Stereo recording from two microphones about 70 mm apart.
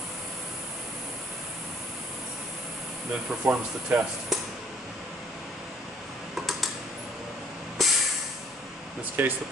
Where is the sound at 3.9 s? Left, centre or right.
Right.